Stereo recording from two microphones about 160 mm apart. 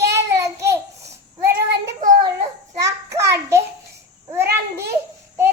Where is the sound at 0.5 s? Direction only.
20° right (ahead or behind).